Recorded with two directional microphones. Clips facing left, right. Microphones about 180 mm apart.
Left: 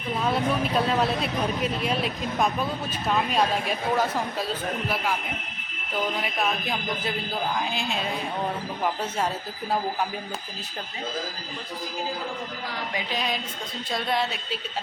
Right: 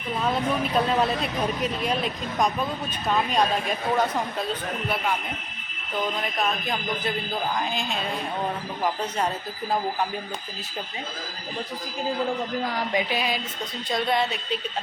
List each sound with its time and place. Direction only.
0.2 s speech: centre (ahead or behind)
6.1 s speech: 5° left (ahead or behind)
12.9 s a sound: 20° right (ahead or behind)
13.1 s speech: 5° right (ahead or behind)